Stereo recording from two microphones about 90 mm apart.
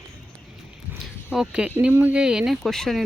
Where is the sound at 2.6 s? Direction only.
5° left (ahead or behind).